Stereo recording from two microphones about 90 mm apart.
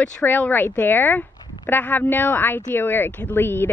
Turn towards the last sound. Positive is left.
turn(degrees=25)  # may be behind; listen again after turning